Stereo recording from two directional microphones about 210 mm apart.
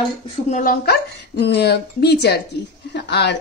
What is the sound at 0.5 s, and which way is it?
A woman's voice, 40° left (ahead or behind).